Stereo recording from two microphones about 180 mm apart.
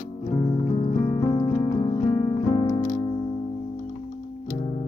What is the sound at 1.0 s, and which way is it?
Music, 20° left (ahead or behind).